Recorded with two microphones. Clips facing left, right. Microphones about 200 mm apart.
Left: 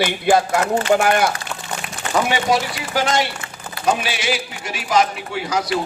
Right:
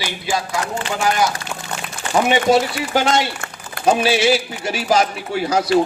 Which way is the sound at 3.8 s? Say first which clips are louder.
Right 6 dB; 30° right (ahead or behind).